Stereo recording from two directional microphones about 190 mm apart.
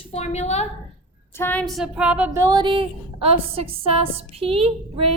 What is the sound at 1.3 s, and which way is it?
A woman's voice, 10° left (ahead or behind).